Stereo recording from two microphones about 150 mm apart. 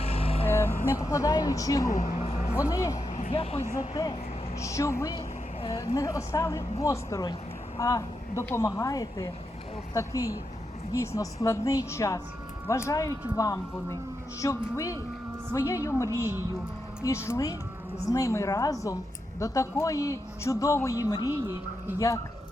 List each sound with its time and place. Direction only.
0.0 s vehicle: 40° left (ahead or behind)
0.4 s speech: 15° left (ahead or behind)
1.9 s a sound: 55° left (ahead or behind)
2.6 s a woman's voice: 20° left (ahead or behind)
3.3 s speech: 40° left (ahead or behind)
3.9 s a woman's voice: 25° left (ahead or behind)
10.9 s a woman's voice: 20° left (ahead or behind)